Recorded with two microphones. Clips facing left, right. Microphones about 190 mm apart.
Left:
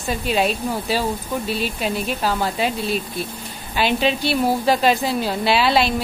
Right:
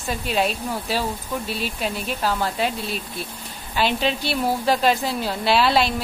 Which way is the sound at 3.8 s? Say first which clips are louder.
Left 3 dB; 5° left (ahead or behind).